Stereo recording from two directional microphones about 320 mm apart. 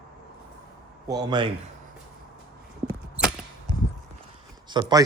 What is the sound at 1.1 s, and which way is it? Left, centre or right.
Speech, centre.